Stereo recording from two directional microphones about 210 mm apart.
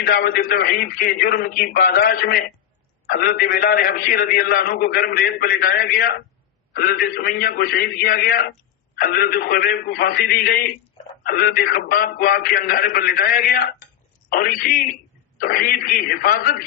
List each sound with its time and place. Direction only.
0.0 s a man's voice: 45° left (ahead or behind)